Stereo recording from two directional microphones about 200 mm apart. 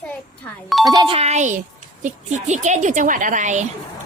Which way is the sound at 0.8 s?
20° right (ahead or behind).